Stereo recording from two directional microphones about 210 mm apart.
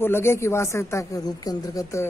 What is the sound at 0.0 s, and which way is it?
Speech, 10° left (ahead or behind).